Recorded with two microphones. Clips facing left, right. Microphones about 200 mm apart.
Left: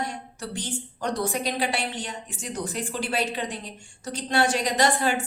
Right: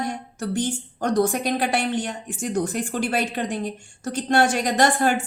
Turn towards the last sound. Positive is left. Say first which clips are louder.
# right 3 dB
turn(degrees=-50)  # may be behind; listen again after turning